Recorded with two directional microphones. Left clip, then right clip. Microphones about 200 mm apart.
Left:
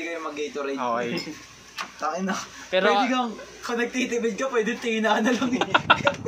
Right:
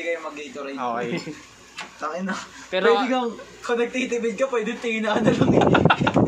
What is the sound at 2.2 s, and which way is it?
Speech, centre (ahead or behind).